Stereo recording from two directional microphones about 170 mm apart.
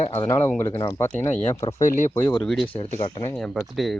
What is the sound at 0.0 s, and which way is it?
Speech, 40° left (ahead or behind).